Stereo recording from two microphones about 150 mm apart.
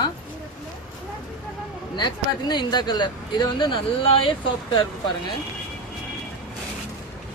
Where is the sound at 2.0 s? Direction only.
30° left (ahead or behind).